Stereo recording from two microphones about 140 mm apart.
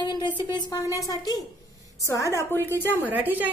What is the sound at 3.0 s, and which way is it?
Speech, 10° right (ahead or behind).